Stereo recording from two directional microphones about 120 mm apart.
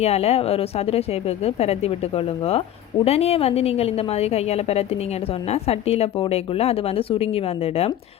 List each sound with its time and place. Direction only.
0.0 s a woman's voice: 60° left (ahead or behind)